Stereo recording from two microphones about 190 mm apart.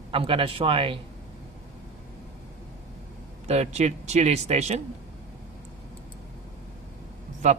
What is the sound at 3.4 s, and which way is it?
Speech, 35° right (ahead or behind).